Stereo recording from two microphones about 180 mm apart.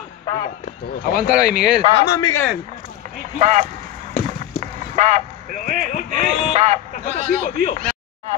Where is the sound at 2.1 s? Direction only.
20° left (ahead or behind).